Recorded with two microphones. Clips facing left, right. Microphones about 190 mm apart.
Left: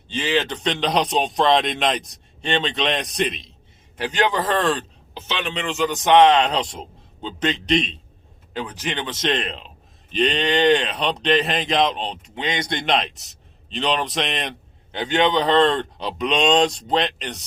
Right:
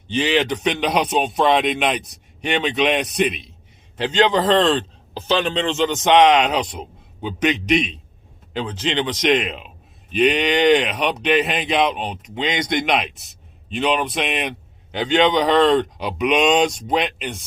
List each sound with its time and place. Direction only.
0.1 s a man's voice: 20° right (ahead or behind)
3.9 s a man's voice: 20° right (ahead or behind)
12.3 s speech: 20° right (ahead or behind)
13.7 s a man's voice: 5° right (ahead or behind)
14.9 s a man's voice: 20° right (ahead or behind)